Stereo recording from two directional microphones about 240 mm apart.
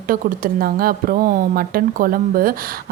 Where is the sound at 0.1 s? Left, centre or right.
Right.